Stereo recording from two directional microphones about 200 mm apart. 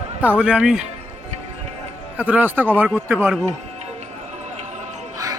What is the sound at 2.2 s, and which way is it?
Speech, 10° right (ahead or behind).